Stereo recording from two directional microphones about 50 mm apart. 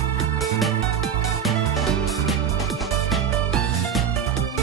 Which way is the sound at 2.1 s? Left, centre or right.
Centre.